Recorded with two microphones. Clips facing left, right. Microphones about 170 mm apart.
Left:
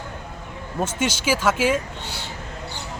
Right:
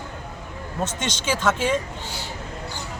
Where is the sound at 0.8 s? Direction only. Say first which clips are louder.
Left 4 dB; 10° left (ahead or behind).